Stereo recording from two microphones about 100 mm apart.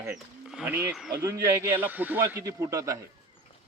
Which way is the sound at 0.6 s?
20° right (ahead or behind).